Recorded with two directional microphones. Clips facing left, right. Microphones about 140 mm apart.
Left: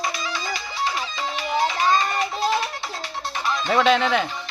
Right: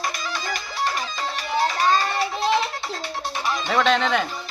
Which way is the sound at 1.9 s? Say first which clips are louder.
Even; centre (ahead or behind).